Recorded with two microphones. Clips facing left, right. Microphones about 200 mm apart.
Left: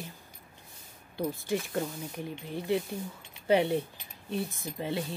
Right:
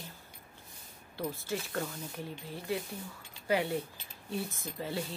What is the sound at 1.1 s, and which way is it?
Speech, 15° left (ahead or behind).